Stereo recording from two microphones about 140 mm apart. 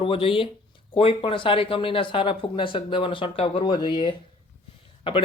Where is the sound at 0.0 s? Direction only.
40° left (ahead or behind).